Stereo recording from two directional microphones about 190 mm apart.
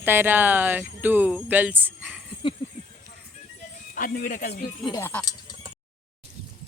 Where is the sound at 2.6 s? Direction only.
25° left (ahead or behind).